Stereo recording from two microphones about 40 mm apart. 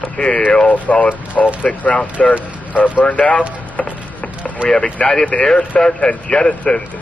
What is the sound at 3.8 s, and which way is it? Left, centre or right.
Music, left.